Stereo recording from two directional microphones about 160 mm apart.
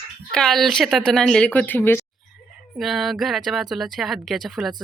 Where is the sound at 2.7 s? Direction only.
Centre (ahead or behind).